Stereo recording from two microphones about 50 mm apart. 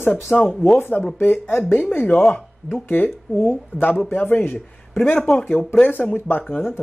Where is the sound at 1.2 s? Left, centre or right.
Left.